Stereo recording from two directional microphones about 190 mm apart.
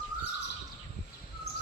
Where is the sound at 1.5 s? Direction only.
60° left (ahead or behind).